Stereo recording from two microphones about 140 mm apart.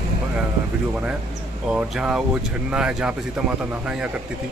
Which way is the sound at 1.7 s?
5° right (ahead or behind).